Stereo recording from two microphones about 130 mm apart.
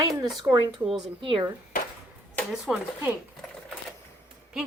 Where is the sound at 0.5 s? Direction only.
Centre (ahead or behind).